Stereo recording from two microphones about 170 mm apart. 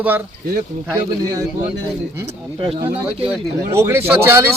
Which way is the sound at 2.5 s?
30° right (ahead or behind).